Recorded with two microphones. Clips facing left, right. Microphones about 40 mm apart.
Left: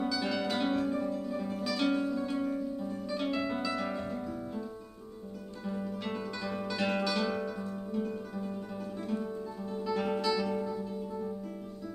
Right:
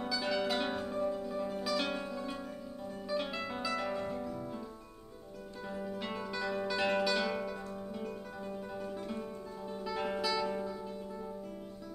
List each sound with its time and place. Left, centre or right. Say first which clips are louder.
0.0 s music: left 2 dB; centre
2.3 s music: left 10 dB; centre
2.8 s music: left 2 dB; centre
6.0 s music: left 1 dB; centre
9.7 s music: left 4 dB; centre